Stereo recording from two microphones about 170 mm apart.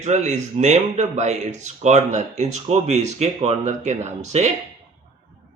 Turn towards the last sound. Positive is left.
turn(degrees=-40)  # may be behind; listen again after turning